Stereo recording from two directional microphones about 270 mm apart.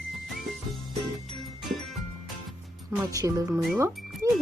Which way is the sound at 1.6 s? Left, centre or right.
Centre.